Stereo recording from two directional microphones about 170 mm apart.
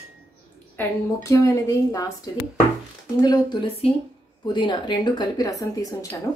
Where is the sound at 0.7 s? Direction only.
15° left (ahead or behind).